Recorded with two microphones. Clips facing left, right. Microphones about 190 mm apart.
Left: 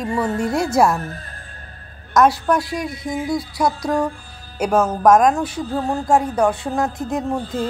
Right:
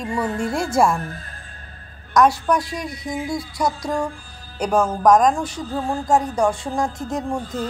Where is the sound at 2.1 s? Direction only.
5° left (ahead or behind).